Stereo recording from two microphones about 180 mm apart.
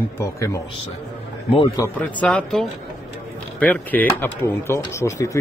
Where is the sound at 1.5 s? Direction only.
30° left (ahead or behind).